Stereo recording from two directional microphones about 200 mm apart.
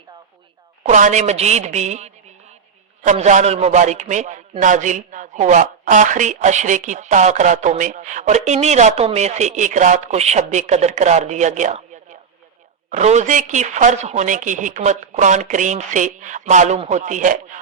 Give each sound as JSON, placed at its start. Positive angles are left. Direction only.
{"t": 0.9, "sound": "a woman's voice", "side_deg": -35}
{"t": 12.9, "sound": "a woman's voice", "side_deg": -35}